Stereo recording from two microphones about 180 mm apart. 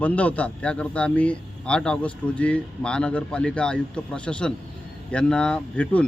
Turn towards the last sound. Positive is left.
turn(degrees=5)  # may be behind; listen again after turning